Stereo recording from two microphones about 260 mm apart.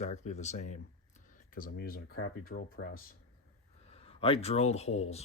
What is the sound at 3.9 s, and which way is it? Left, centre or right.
Speech, left.